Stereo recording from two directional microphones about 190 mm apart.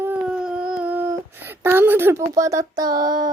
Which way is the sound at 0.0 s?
5° right (ahead or behind).